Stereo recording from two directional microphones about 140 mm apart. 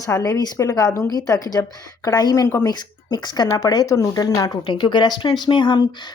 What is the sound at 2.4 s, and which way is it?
Speech, 20° left (ahead or behind).